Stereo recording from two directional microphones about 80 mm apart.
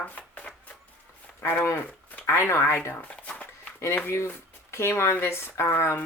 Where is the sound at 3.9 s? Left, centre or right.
Left.